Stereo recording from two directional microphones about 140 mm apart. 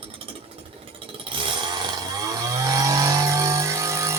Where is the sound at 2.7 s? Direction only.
25° right (ahead or behind).